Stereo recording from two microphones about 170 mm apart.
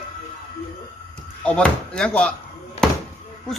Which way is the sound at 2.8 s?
35° left (ahead or behind).